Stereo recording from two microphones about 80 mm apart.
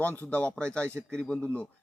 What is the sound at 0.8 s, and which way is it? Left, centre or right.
Speech, right.